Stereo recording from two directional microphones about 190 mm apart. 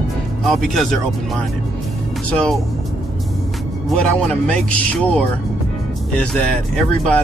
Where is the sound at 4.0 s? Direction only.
5° left (ahead or behind).